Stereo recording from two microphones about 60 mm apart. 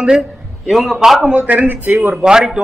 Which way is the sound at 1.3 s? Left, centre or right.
Right.